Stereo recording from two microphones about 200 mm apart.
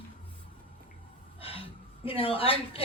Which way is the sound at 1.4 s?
30° left (ahead or behind).